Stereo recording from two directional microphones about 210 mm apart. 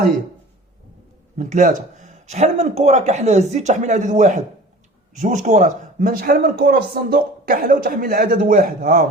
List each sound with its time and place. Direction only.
1.4 s speech: 35° right (ahead or behind)